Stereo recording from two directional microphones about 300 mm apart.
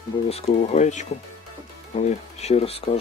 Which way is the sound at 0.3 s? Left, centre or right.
Left.